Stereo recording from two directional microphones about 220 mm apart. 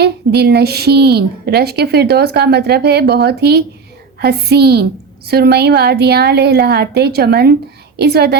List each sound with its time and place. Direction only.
0.0 s a woman's voice: 45° right (ahead or behind)